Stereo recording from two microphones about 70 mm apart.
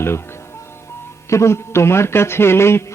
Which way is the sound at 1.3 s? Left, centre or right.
Left.